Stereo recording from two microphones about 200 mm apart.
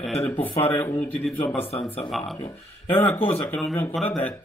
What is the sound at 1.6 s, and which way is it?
Speech, 30° left (ahead or behind).